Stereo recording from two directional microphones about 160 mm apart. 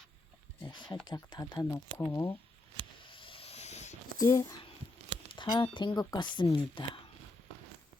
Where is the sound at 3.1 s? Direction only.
35° left (ahead or behind).